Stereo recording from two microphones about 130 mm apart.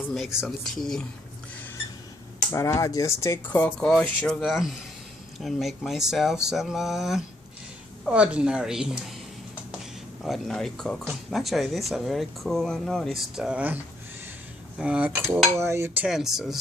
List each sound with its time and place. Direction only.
0.1 s speech: centre (ahead or behind)
2.5 s speech: 20° left (ahead or behind); by 9.2 s 5° right (ahead or behind)
10.2 s speech: centre (ahead or behind)
14.8 s cutlery: 10° right (ahead or behind)
15.5 s speech: 20° right (ahead or behind)
16.0 s speech: 5° right (ahead or behind)